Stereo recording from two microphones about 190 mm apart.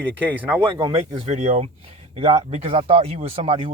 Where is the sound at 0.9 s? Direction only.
25° right (ahead or behind).